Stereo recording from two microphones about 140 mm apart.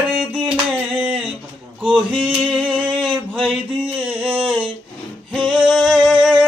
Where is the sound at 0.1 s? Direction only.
5° right (ahead or behind).